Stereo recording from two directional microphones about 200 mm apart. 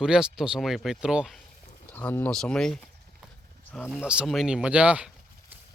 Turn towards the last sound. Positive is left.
turn(degrees=-5)  # may be behind; listen again after turning